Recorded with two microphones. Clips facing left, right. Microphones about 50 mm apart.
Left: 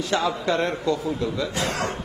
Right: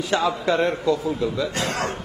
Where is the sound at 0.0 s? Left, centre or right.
Centre.